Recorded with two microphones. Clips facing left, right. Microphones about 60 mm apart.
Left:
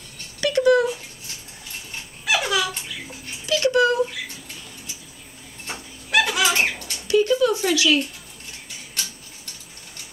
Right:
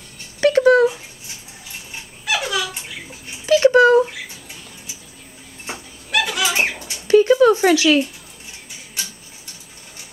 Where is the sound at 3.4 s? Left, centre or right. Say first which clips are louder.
Right 7 dB; right.